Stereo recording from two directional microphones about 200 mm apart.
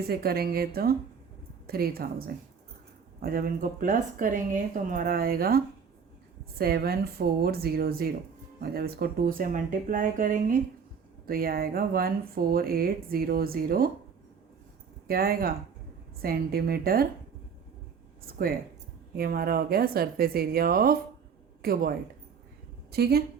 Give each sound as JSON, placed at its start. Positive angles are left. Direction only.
{"t": 0.1, "sound": "speech", "side_deg": -50}
{"t": 15.0, "sound": "speech", "side_deg": -50}
{"t": 18.3, "sound": "a woman's voice", "side_deg": -50}